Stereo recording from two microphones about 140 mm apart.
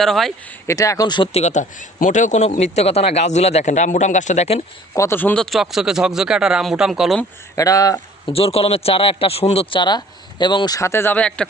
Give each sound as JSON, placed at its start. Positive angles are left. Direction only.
{"t": 0.0, "sound": "speech", "side_deg": 0}
{"t": 0.7, "sound": "speech", "side_deg": 25}
{"t": 1.3, "sound": "speech", "side_deg": 55}
{"t": 2.0, "sound": "speech", "side_deg": 65}
{"t": 4.9, "sound": "speech", "side_deg": 15}
{"t": 7.5, "sound": "speech", "side_deg": 25}
{"t": 8.3, "sound": "a man's voice", "side_deg": 45}